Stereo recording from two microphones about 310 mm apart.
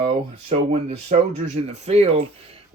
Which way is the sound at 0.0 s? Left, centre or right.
Centre.